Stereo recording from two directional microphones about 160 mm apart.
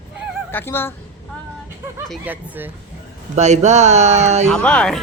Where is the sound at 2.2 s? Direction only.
10° right (ahead or behind).